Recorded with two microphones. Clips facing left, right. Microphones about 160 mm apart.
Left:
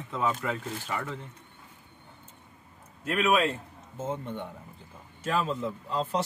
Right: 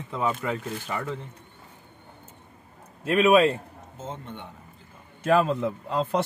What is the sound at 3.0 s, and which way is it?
Speech, 30° right (ahead or behind).